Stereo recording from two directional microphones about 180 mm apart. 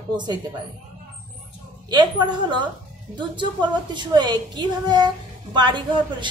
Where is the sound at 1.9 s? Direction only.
25° right (ahead or behind).